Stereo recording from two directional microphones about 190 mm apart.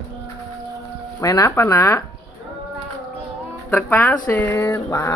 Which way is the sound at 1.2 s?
15° left (ahead or behind).